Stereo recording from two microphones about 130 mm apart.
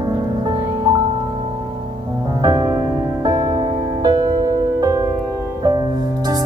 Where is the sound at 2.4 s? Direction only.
30° right (ahead or behind).